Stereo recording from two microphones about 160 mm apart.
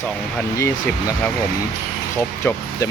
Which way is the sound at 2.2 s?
15° left (ahead or behind).